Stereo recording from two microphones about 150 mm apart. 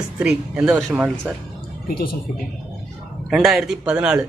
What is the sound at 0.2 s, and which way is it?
Speech, 10° right (ahead or behind).